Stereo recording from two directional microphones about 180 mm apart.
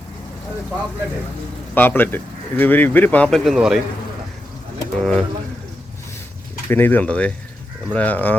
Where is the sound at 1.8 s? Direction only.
10° left (ahead or behind).